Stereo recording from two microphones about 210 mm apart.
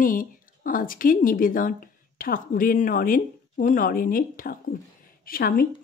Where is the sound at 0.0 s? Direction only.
40° left (ahead or behind).